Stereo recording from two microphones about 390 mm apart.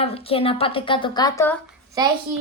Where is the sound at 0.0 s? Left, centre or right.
Centre.